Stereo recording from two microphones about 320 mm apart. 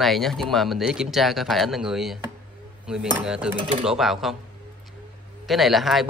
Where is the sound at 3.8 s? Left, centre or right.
Centre.